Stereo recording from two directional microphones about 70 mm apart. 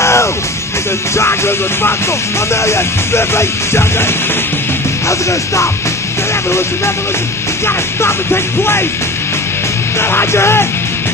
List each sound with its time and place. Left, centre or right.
0.0 s music: left
7.6 s music: left
9.9 s music: left